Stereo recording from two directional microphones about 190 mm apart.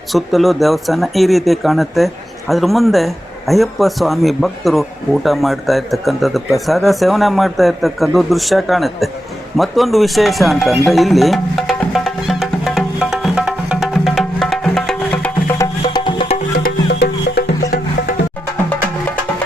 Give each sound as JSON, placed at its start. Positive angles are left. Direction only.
{"t": 0.1, "sound": "speech", "side_deg": 0}
{"t": 9.6, "sound": "music", "side_deg": 0}
{"t": 15.8, "sound": "music", "side_deg": 25}
{"t": 16.6, "sound": "music", "side_deg": 60}